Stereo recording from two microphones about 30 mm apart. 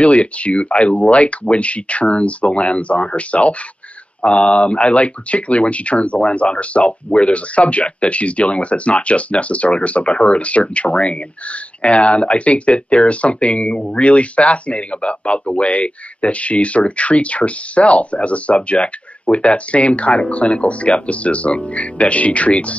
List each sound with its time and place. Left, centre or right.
0.0 s speech: left